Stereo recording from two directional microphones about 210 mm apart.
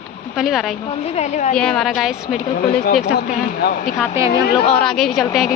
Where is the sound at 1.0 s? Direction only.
30° left (ahead or behind).